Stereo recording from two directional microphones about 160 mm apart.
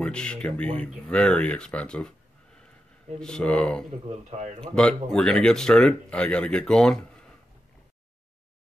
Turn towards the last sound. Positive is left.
turn(degrees=5)  # may be behind; listen again after turning